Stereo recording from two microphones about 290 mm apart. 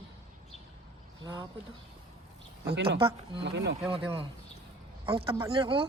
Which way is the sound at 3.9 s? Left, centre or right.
Centre.